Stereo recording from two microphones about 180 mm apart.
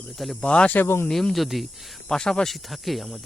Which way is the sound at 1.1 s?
Centre (ahead or behind).